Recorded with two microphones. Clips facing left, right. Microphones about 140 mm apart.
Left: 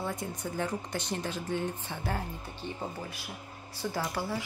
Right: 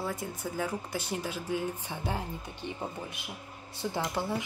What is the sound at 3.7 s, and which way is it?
Speech, 25° right (ahead or behind).